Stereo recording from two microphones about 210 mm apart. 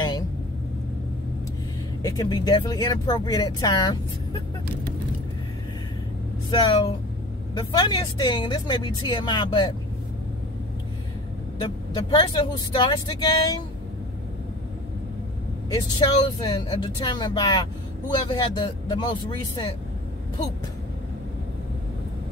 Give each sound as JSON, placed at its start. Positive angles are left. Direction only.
{"t": 2.0, "sound": "speech", "side_deg": 20}
{"t": 6.5, "sound": "speech", "side_deg": 20}
{"t": 11.6, "sound": "speech", "side_deg": 20}
{"t": 15.7, "sound": "speech", "side_deg": 20}